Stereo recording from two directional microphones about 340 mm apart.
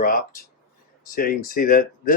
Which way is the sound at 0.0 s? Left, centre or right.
Left.